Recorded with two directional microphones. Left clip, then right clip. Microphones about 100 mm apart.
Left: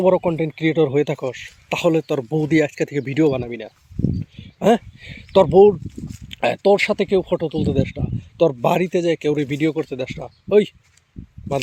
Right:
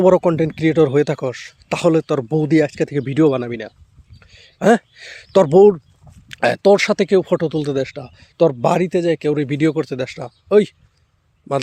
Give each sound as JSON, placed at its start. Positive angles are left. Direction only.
{"t": 0.0, "sound": "speech", "side_deg": -80}
{"t": 0.5, "sound": "speech", "side_deg": -40}
{"t": 4.4, "sound": "speech", "side_deg": -35}
{"t": 6.2, "sound": "speech", "side_deg": -40}
{"t": 7.9, "sound": "speech", "side_deg": -40}
{"t": 8.4, "sound": "speech", "side_deg": -20}
{"t": 9.6, "sound": "speech", "side_deg": -45}